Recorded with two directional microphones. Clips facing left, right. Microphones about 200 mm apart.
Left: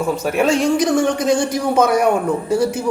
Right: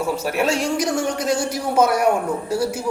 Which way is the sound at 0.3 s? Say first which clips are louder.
Left 7 dB; 5° right (ahead or behind).